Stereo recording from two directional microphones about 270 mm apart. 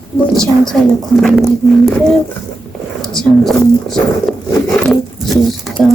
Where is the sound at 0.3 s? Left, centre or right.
Centre.